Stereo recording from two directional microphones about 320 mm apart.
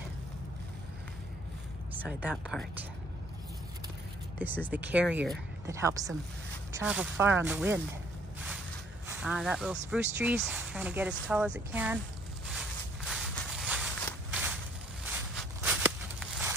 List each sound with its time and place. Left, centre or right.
1.9 s speech: centre
4.4 s a woman's voice: centre
13.1 s walk: centre
15.6 s a sound: centre